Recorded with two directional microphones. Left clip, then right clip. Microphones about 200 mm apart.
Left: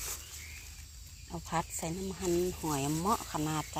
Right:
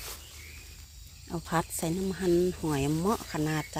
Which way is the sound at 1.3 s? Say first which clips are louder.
Right 4 dB; 45° right (ahead or behind).